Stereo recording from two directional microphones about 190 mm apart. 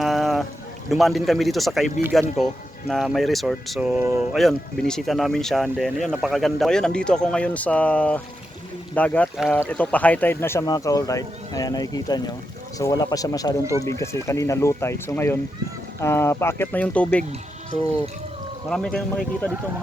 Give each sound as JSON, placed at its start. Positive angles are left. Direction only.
{"t": 0.0, "sound": "boat", "side_deg": 0}
{"t": 0.9, "sound": "speech", "side_deg": 0}
{"t": 4.4, "sound": "speech", "side_deg": 0}